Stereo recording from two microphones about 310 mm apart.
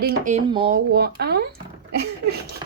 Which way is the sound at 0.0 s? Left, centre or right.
Right.